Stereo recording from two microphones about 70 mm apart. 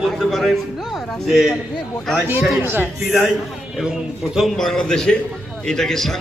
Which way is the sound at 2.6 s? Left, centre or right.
Right.